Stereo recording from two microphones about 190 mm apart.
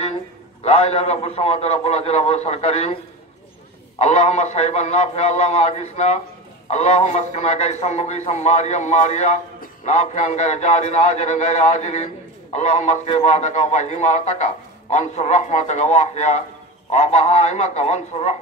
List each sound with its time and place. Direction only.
0.7 s a man's voice: 35° left (ahead or behind)
4.0 s a man's voice: 35° left (ahead or behind)